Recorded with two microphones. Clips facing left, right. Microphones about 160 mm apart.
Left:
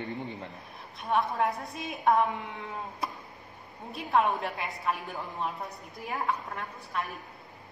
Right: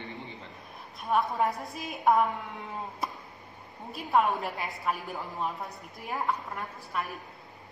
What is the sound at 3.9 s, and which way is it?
A woman's voice, centre (ahead or behind).